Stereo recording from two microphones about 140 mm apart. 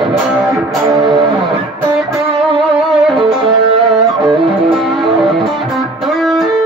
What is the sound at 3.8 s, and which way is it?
Music, centre (ahead or behind).